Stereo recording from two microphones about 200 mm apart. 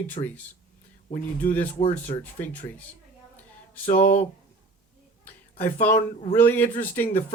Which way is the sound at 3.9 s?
40° left (ahead or behind).